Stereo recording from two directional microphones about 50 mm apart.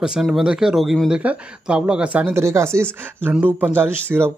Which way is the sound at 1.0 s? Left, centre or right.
Centre.